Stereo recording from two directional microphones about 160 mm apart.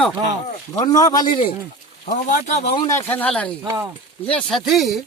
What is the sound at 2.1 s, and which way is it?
Speech, 55° left (ahead or behind).